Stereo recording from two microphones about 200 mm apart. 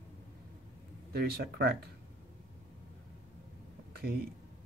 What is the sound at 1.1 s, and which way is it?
Speech, 50° right (ahead or behind).